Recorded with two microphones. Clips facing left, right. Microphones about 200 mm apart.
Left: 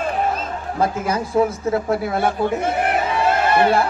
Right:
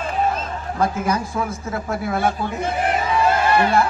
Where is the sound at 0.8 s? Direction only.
30° left (ahead or behind).